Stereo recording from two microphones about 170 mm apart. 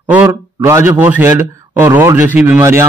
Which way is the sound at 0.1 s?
10° right (ahead or behind).